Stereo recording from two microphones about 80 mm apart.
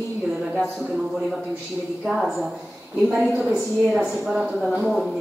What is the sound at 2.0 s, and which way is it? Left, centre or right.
A woman's voice, centre.